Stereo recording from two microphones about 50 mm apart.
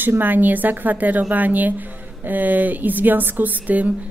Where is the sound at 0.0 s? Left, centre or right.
Right.